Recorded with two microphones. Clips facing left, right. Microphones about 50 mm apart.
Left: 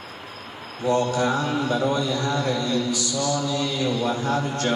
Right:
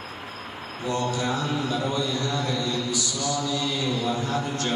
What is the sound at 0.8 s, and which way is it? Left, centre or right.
Speech, left.